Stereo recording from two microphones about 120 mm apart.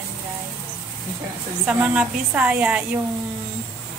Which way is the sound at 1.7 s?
10° right (ahead or behind).